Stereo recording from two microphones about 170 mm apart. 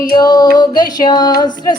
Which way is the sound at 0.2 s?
25° left (ahead or behind).